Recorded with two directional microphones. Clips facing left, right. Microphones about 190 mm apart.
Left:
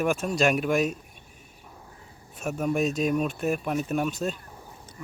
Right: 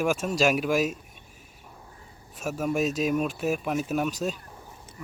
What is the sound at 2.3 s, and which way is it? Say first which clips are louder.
Speech: left 1 dB; centre (ahead or behind).